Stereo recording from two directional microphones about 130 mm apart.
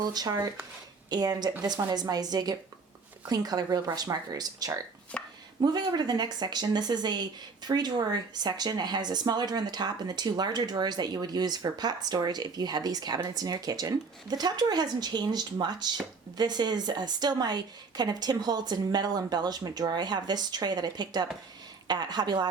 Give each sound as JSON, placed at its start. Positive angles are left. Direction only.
{"t": 0.0, "sound": "speech", "side_deg": -30}
{"t": 5.1, "sound": "a sound", "side_deg": 10}
{"t": 5.5, "sound": "speech", "side_deg": -35}